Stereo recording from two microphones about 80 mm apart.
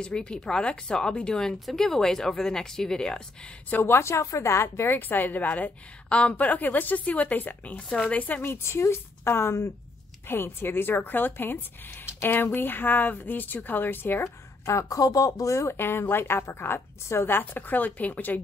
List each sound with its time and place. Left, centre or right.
0.0 s speech: centre
3.7 s a woman's voice: left
14.7 s a woman's voice: left